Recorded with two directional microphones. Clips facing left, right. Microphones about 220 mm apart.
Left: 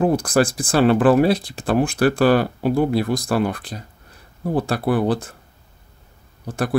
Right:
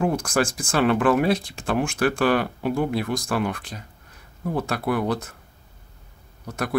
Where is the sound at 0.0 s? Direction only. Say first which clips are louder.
Left 5 dB; 35° left (ahead or behind).